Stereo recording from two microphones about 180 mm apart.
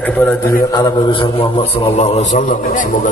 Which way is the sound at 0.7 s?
20° left (ahead or behind).